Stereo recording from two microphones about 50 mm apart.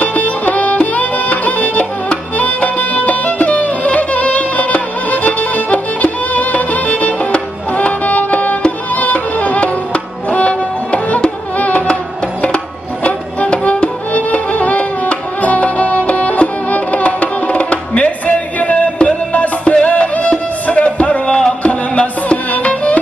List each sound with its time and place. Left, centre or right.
0.0 s music: left